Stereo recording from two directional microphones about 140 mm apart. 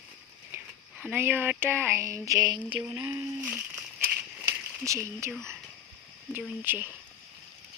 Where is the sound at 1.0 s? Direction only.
10° right (ahead or behind).